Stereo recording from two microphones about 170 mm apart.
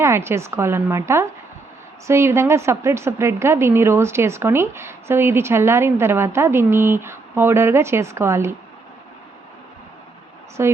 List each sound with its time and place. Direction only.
0.0 s a woman's voice: 15° right (ahead or behind)
10.6 s a woman's voice: 15° right (ahead or behind)